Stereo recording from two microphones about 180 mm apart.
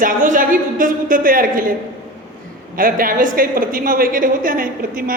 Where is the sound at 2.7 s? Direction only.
50° right (ahead or behind).